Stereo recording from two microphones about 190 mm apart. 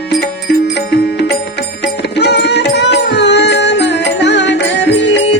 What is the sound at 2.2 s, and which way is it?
Music, 60° left (ahead or behind).